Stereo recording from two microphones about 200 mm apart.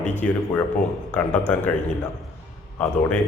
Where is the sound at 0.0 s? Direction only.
35° left (ahead or behind).